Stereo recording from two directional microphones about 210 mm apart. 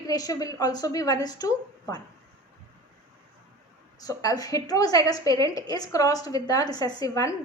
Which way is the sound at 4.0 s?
15° left (ahead or behind).